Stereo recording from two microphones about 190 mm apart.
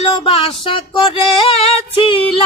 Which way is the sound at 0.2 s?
30° left (ahead or behind).